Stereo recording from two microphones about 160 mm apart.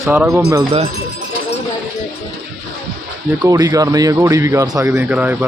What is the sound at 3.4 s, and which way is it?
Speech, 20° right (ahead or behind).